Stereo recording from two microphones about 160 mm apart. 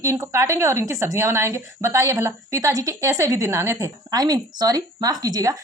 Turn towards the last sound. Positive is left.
turn(degrees=-20)  # may be behind; listen again after turning